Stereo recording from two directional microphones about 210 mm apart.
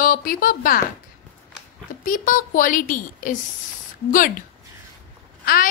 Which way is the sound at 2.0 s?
40° left (ahead or behind).